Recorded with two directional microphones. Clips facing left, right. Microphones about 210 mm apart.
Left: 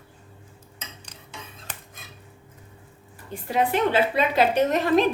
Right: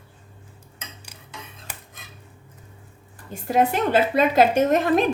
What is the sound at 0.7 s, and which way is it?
Cutlery, 10° right (ahead or behind).